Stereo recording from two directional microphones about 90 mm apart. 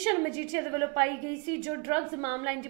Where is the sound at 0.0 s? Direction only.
20° right (ahead or behind).